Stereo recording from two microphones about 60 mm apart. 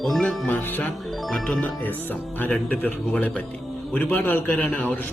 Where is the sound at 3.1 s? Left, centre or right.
Left.